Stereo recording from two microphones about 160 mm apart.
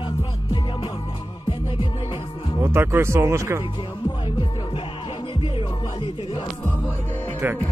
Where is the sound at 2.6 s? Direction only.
15° right (ahead or behind).